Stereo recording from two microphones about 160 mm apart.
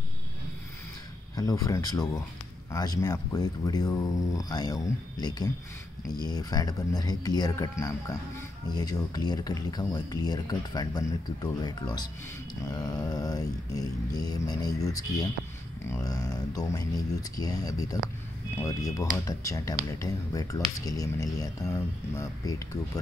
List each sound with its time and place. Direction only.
1.3 s speech: 20° left (ahead or behind)